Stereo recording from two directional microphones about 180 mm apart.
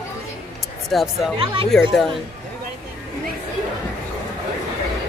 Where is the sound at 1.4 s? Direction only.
30° right (ahead or behind).